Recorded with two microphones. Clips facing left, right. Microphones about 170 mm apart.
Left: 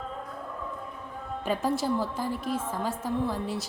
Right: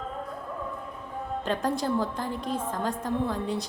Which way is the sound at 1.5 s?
5° left (ahead or behind).